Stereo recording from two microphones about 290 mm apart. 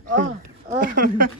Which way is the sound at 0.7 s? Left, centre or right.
Right.